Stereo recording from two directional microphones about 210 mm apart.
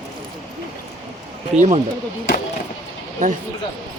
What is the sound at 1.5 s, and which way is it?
Speech, 30° right (ahead or behind).